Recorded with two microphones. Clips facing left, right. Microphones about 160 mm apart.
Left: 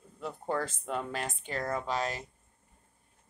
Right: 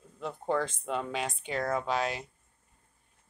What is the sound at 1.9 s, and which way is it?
Speech, 40° left (ahead or behind).